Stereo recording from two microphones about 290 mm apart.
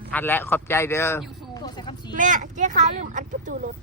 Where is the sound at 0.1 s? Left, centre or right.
Centre.